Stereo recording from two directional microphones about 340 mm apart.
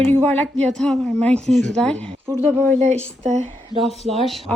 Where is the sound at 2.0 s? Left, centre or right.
Centre.